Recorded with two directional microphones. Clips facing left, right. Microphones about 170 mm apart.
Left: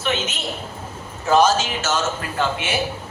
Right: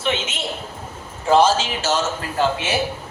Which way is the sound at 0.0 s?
25° right (ahead or behind).